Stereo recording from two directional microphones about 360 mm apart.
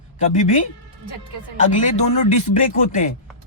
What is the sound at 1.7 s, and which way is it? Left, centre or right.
Speech, centre.